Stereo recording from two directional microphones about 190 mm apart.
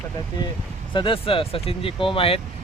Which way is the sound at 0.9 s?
25° left (ahead or behind).